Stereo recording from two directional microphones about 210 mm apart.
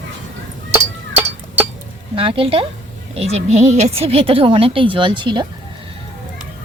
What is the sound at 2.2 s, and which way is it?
A woman's voice, 25° right (ahead or behind).